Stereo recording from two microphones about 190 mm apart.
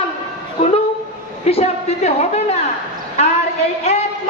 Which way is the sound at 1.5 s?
30° left (ahead or behind).